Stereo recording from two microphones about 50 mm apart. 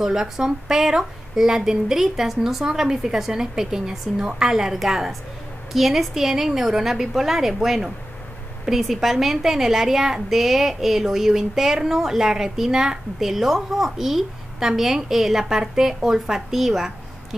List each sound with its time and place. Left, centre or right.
0.0 s a woman's voice: centre